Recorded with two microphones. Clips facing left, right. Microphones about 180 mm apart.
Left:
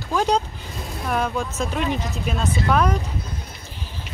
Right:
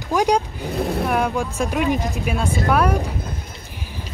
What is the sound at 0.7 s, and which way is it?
Speech, 65° right (ahead or behind).